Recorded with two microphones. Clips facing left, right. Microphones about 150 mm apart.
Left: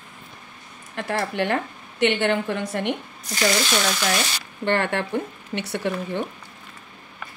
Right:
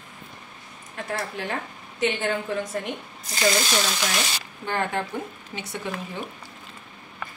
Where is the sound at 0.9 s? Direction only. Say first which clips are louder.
Left 5 dB; 70° left (ahead or behind).